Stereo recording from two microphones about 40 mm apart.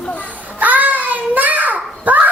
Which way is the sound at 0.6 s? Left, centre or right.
Right.